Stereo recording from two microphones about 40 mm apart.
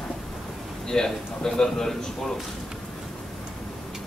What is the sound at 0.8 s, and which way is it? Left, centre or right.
A man's voice, centre.